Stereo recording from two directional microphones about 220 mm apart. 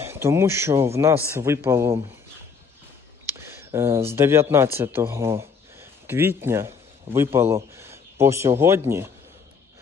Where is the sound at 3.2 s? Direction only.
10° right (ahead or behind).